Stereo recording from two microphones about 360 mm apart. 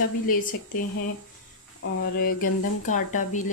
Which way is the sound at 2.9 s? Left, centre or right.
Left.